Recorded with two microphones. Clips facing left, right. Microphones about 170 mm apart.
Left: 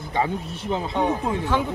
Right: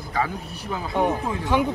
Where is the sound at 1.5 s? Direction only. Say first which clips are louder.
Right 4 dB; 15° right (ahead or behind).